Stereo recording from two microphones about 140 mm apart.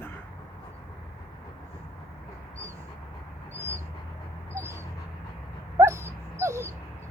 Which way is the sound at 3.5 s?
20° right (ahead or behind).